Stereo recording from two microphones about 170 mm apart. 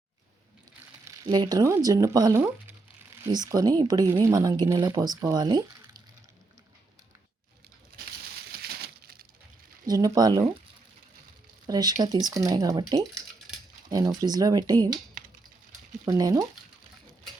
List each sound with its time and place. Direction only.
1.0 s speech: 20° right (ahead or behind)
7.9 s a sound: 60° right (ahead or behind)
9.8 s speech: 20° right (ahead or behind)
11.6 s speech: 25° right (ahead or behind)
14.2 s speech: 20° right (ahead or behind)
16.0 s speech: 20° right (ahead or behind)